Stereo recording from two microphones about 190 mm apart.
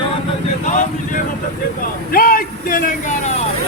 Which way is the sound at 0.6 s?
40° left (ahead or behind).